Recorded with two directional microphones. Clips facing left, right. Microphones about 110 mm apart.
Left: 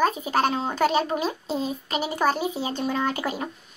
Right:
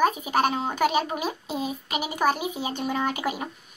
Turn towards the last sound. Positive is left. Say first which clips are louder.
# left 1 dB
turn(degrees=-10)  # may be behind; listen again after turning